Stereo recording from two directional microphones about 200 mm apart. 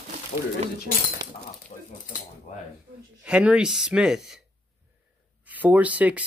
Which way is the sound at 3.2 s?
5° right (ahead or behind).